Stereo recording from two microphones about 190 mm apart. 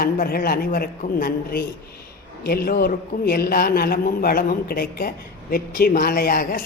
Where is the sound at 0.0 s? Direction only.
50° left (ahead or behind).